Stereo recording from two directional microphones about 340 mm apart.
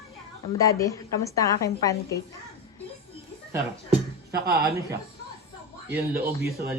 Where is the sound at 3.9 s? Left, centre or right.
Right.